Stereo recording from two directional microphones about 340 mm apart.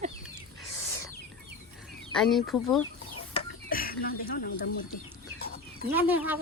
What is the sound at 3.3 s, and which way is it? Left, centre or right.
Speech, left.